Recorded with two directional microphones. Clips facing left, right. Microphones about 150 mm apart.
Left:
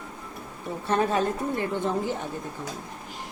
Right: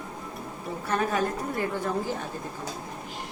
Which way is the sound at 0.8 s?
25° left (ahead or behind).